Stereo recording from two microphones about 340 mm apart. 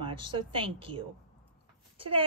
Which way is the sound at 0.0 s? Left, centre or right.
Centre.